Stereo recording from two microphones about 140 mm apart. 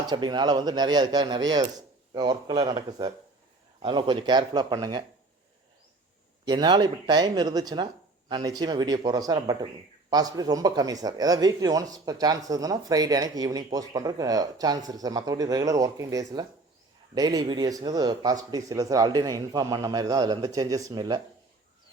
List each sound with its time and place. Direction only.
0.1 s speech: 30° right (ahead or behind)
6.4 s speech: 30° right (ahead or behind)